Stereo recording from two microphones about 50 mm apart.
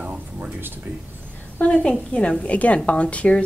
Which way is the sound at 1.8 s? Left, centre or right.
Left.